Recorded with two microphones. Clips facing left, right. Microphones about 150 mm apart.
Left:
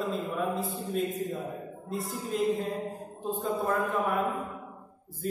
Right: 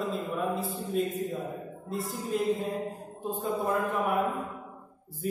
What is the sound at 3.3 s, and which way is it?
Mantra, 10° right (ahead or behind).